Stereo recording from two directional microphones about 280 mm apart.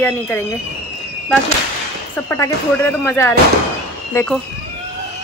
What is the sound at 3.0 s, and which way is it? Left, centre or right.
Speech, centre.